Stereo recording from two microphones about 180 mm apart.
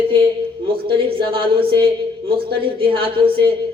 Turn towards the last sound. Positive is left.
turn(degrees=-30)  # may be behind; listen again after turning